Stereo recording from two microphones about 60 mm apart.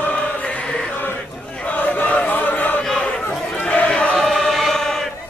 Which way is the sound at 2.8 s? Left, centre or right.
Centre.